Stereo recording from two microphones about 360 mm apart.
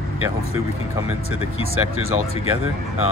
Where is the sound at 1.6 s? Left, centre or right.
Right.